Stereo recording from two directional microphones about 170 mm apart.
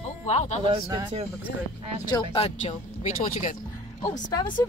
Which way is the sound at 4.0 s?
25° left (ahead or behind).